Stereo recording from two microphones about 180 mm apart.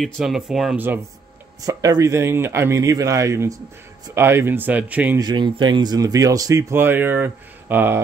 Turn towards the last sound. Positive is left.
turn(degrees=-10)  # may be behind; listen again after turning